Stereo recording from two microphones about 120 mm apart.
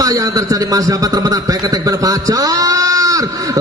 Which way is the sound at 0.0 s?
30° right (ahead or behind).